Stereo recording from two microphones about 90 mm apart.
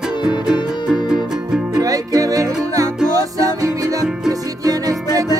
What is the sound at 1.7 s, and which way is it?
Music, 40° right (ahead or behind).